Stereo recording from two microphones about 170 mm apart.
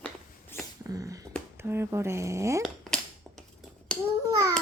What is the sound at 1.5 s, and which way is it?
Speech, 15° right (ahead or behind).